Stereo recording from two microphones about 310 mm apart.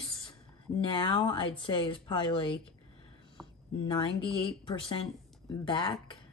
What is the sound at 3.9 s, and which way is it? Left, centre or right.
Speech, centre.